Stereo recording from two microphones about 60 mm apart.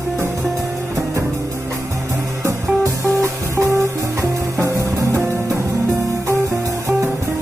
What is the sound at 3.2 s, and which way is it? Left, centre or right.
Music, right.